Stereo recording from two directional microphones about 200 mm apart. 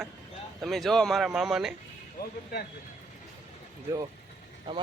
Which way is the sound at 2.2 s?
50° left (ahead or behind).